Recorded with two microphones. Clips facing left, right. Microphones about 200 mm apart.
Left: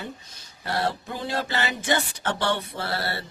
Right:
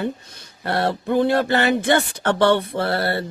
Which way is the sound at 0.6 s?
60° right (ahead or behind).